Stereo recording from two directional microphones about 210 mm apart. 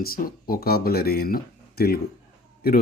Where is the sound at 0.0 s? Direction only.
45° left (ahead or behind).